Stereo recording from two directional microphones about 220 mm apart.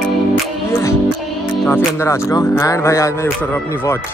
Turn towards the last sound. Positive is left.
turn(degrees=15)  # may be behind; listen again after turning